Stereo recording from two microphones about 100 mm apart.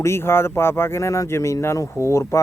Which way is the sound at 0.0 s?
25° left (ahead or behind).